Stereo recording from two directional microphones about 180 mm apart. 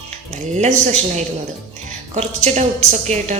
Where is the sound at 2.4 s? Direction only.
35° right (ahead or behind).